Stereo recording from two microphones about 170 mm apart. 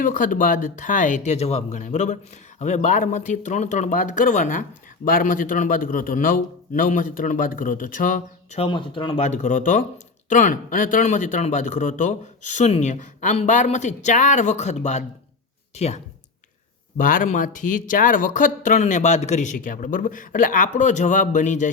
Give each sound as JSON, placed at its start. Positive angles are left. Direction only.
{"t": 0.0, "sound": "speech", "side_deg": 55}
{"t": 8.5, "sound": "speech", "side_deg": 30}
{"t": 17.0, "sound": "speech", "side_deg": 50}